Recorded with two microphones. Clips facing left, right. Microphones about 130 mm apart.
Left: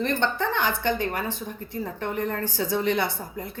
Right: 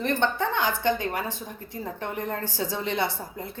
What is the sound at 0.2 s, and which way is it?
A woman's voice, 15° right (ahead or behind).